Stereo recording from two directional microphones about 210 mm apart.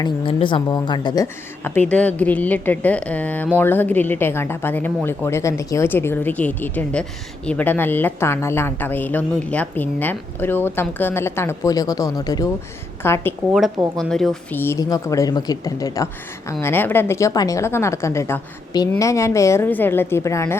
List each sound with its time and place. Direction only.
0.0 s speech: 25° left (ahead or behind)